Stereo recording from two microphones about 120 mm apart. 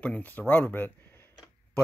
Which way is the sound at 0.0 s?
10° left (ahead or behind).